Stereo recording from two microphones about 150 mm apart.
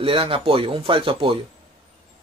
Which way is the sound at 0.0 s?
35° right (ahead or behind).